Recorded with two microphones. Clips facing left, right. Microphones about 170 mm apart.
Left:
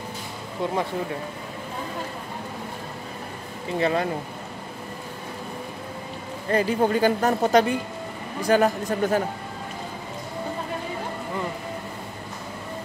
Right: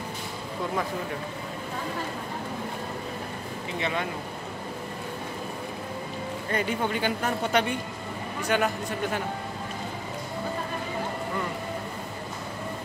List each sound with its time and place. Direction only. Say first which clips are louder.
3.8 s a woman's voice: left 7 dB; 35° left (ahead or behind)
6.5 s a woman's voice: left 7 dB; 35° left (ahead or behind)